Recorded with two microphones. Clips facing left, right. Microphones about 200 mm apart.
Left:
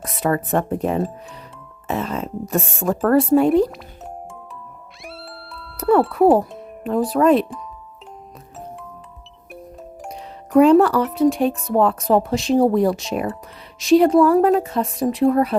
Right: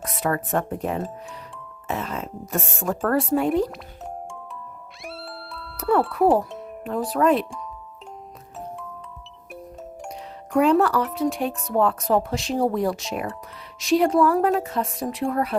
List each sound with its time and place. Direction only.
0.2 s speech: 25° left (ahead or behind)
5.0 s music: centre (ahead or behind)
6.8 s speech: 25° left (ahead or behind)
10.5 s speech: 30° left (ahead or behind)